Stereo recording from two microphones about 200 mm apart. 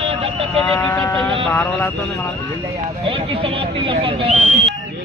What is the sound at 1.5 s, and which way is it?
Speech, 15° left (ahead or behind).